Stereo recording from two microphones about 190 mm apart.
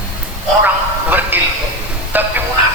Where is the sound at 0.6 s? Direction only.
10° right (ahead or behind).